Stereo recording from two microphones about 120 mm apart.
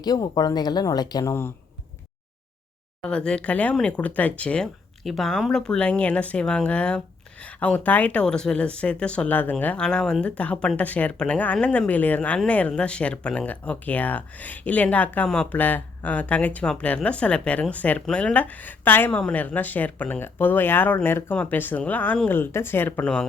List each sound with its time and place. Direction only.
0.0 s speech: 35° left (ahead or behind)
3.0 s speech: 5° left (ahead or behind)